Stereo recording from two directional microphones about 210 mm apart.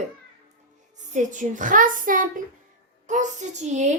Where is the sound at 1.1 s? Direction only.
35° right (ahead or behind).